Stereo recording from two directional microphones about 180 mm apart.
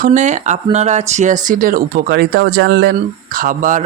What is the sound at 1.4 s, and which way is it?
Speech, 50° right (ahead or behind).